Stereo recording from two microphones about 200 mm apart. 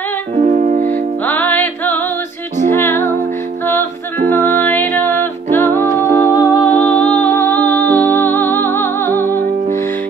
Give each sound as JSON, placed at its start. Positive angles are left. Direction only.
{"t": 0.4, "sound": "music", "side_deg": -35}
{"t": 1.2, "sound": "music", "side_deg": 10}
{"t": 4.4, "sound": "music", "side_deg": 10}